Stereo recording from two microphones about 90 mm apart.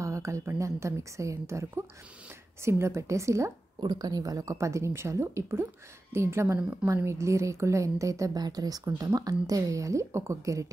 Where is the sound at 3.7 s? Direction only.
50° right (ahead or behind).